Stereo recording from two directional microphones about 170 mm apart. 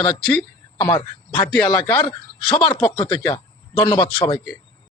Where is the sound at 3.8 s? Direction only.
30° left (ahead or behind).